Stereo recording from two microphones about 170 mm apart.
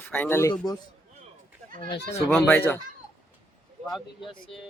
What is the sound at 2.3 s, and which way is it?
Speech, 15° left (ahead or behind).